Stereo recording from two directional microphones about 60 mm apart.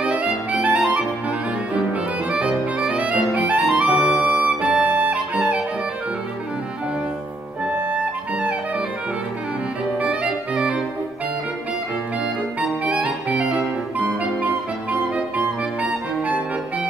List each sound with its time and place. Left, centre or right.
0.0 s clarinet: right
1.7 s music: right
5.4 s music: centre
7.7 s music: right
9.9 s clarinet: right
12.5 s clarinet: right
14.2 s music: right
15.3 s clarinet: right